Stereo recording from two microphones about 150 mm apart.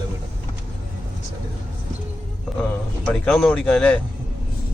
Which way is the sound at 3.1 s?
5° left (ahead or behind).